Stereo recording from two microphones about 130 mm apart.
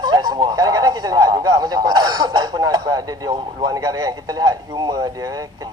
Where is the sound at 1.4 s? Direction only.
30° right (ahead or behind).